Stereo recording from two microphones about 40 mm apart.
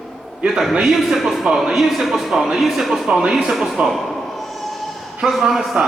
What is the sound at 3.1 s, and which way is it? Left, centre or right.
Speech, right.